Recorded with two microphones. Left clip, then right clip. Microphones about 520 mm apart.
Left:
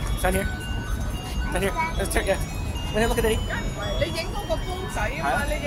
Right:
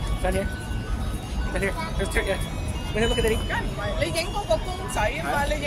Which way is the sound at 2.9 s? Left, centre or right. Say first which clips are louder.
Left 1 dB; left.